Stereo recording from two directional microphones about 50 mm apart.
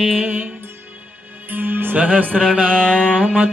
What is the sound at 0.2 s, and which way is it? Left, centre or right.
Music, right.